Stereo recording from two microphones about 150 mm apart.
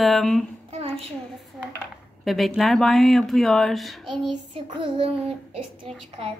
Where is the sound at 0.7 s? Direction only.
40° right (ahead or behind).